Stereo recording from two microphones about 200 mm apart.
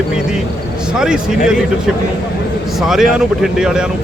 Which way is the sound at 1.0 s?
5° right (ahead or behind).